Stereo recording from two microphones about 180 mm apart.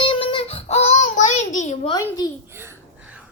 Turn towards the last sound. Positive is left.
turn(degrees=-10)  # may be behind; listen again after turning